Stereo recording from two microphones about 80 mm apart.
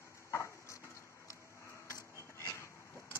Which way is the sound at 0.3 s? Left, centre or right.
Left.